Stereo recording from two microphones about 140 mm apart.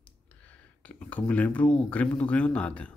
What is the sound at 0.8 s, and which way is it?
A man's voice, 10° left (ahead or behind).